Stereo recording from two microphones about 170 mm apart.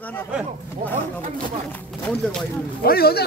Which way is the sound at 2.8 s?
65° left (ahead or behind).